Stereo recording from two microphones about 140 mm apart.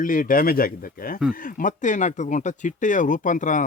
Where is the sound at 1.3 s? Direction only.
75° left (ahead or behind).